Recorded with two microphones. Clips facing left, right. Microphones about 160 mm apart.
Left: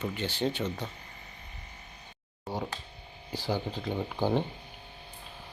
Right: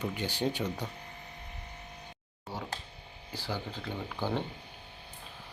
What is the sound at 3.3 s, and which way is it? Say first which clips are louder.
Speech: left 5 dB; 15° left (ahead or behind).